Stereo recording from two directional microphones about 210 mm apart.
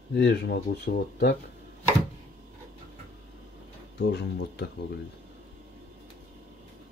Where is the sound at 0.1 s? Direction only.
55° left (ahead or behind).